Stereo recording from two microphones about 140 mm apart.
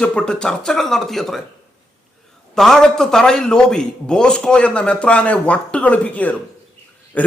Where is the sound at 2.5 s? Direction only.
5° left (ahead or behind).